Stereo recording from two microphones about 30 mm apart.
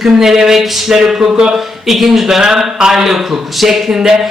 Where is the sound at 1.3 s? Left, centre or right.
Right.